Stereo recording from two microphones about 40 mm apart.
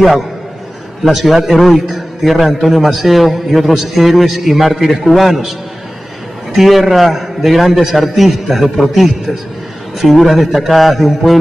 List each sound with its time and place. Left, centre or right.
1.0 s a man's voice: centre
6.5 s a man's voice: centre